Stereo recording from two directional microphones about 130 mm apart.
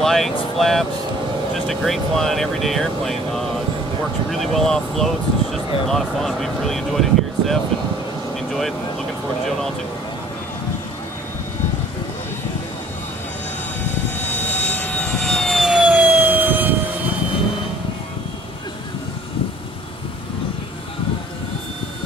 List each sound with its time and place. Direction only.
0.0 s speech: centre (ahead or behind)
8.4 s vehicle: centre (ahead or behind)
14.1 s vehicle: 15° left (ahead or behind)
14.7 s jet engine: 15° left (ahead or behind); by 16.7 s 15° right (ahead or behind)